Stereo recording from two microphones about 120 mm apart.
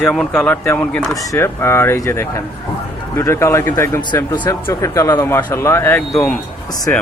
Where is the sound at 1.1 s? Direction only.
25° left (ahead or behind).